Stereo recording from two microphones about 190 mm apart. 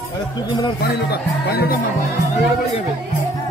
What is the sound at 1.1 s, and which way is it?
Speech, 55° left (ahead or behind).